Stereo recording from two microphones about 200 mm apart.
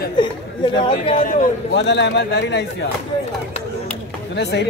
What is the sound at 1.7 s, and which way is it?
Speech, 60° left (ahead or behind).